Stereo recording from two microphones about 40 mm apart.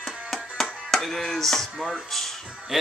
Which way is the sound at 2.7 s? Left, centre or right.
Centre.